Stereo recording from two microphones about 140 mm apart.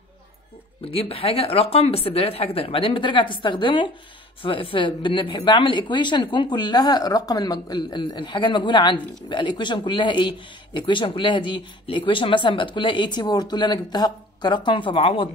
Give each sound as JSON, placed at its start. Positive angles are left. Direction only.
{"t": 0.8, "sound": "speech", "side_deg": 45}